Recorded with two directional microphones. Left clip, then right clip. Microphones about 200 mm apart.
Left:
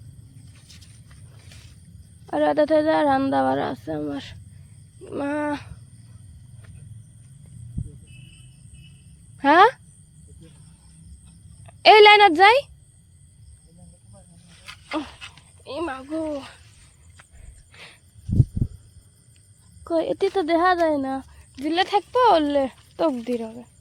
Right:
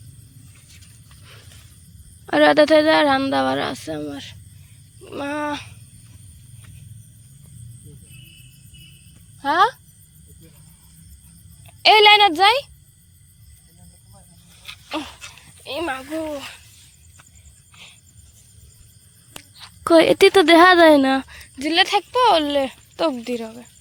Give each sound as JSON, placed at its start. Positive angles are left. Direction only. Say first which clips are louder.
{"t": 2.2, "sound": "a woman's voice", "louder": "right 6 dB", "side_deg": -10}
{"t": 4.1, "sound": "speech", "louder": "left 1 dB", "side_deg": 30}
{"t": 9.4, "sound": "speech", "louder": "left 3 dB", "side_deg": 50}
{"t": 11.6, "sound": "a child's voice", "louder": "left 1 dB", "side_deg": 30}
{"t": 14.9, "sound": "speech", "louder": "right 1 dB", "side_deg": 15}
{"t": 15.6, "sound": "a woman's voice", "louder": "right 4 dB", "side_deg": 5}
{"t": 16.1, "sound": "speech", "louder": "right 1 dB", "side_deg": 10}
{"t": 19.8, "sound": "speech", "louder": "right 10 dB", "side_deg": -20}
{"t": 21.4, "sound": "speech", "louder": "right 4 dB", "side_deg": 0}